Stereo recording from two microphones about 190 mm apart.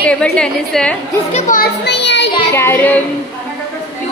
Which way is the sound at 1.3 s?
45° left (ahead or behind).